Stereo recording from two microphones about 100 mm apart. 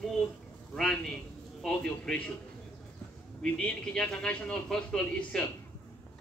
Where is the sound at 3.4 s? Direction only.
10° left (ahead or behind).